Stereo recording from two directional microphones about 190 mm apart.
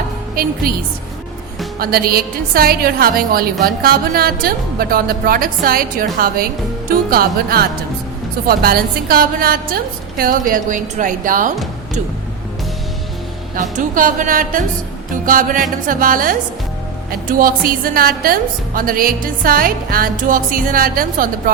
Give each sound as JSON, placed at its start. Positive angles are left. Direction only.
{"t": 0.6, "sound": "a woman's voice", "side_deg": -50}
{"t": 1.8, "sound": "a woman's voice", "side_deg": -50}
{"t": 13.6, "sound": "a woman's voice", "side_deg": -45}